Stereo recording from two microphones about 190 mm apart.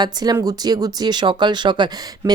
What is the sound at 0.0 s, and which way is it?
Speech, 20° right (ahead or behind).